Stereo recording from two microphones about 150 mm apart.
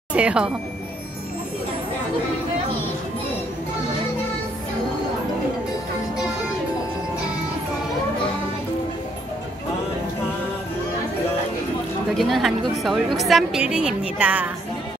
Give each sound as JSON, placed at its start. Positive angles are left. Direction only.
{"t": 0.1, "sound": "speech", "side_deg": -5}
{"t": 12.2, "sound": "a woman's voice", "side_deg": 0}